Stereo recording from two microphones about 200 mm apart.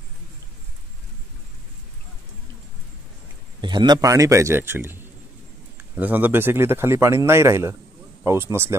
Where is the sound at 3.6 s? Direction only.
20° right (ahead or behind).